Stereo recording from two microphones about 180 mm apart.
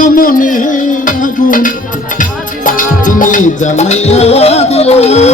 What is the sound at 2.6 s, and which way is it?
Music, 45° left (ahead or behind).